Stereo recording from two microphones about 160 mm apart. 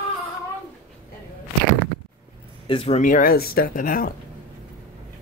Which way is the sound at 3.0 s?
55° left (ahead or behind).